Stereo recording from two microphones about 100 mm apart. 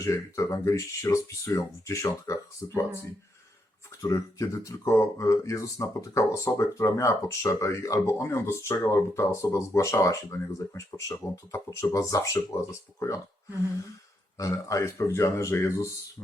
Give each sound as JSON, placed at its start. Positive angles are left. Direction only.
{"t": 0.0, "sound": "speech", "side_deg": 30}
{"t": 4.0, "sound": "speech", "side_deg": 30}
{"t": 14.3, "sound": "speech", "side_deg": 35}